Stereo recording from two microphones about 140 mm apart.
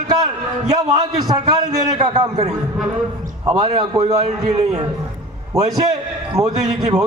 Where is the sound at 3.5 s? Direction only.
30° right (ahead or behind).